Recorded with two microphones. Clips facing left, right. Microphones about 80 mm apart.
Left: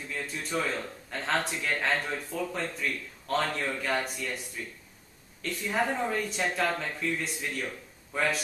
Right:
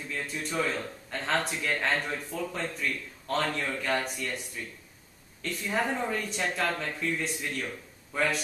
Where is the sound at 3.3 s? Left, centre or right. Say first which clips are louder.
Even; left.